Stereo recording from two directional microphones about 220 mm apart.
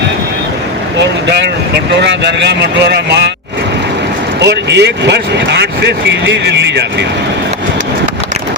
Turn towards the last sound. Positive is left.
turn(degrees=-50)  # may be behind; listen again after turning